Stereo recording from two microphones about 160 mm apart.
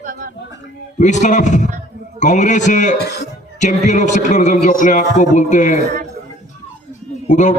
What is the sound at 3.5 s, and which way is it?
A man's voice, 50° left (ahead or behind).